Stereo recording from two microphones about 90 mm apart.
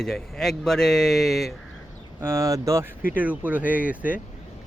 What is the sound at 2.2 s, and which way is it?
Speech, 30° right (ahead or behind).